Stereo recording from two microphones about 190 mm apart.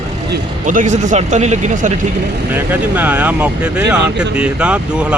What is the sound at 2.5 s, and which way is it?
Speech, 10° right (ahead or behind).